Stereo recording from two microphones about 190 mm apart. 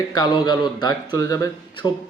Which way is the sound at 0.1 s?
20° left (ahead or behind).